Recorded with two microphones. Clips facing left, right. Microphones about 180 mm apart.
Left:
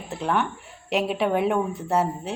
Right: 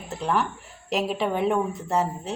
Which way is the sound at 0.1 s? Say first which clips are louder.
Even; centre (ahead or behind).